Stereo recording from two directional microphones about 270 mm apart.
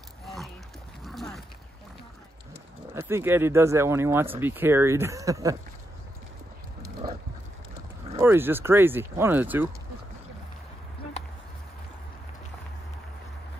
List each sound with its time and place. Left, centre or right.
0.2 s a sound: centre
1.0 s dog: centre
2.9 s speech: centre
6.8 s dog: centre
8.2 s speech: centre